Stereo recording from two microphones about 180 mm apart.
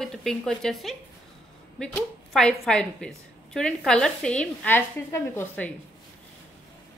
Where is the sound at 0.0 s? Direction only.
5° left (ahead or behind).